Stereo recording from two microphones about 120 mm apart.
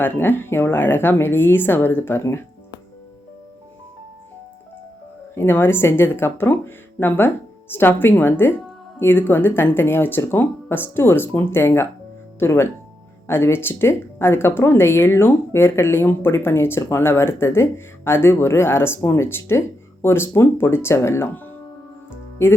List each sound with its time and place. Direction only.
0.0 s a woman's voice: 15° left (ahead or behind)
5.3 s a woman's voice: 20° left (ahead or behind)